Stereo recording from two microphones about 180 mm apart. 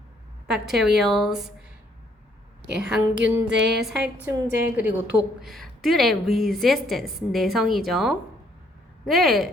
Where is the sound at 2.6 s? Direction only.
5° right (ahead or behind).